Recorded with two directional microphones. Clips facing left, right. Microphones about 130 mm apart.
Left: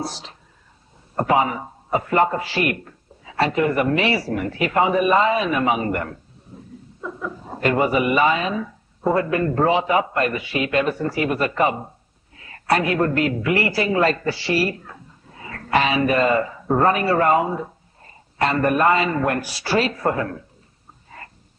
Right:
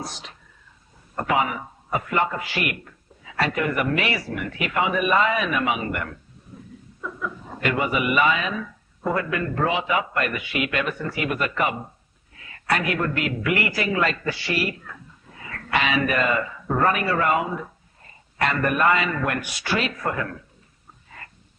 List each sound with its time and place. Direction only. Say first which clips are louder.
0.0 s a man's voice: left 5 dB; 35° left (ahead or behind)
6.5 s a sound: left 2 dB; 30° left (ahead or behind)
7.0 s a man's voice: left 2 dB; 30° left (ahead or behind)